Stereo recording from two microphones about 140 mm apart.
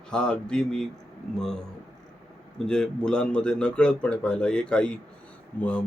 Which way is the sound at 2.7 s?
5° left (ahead or behind).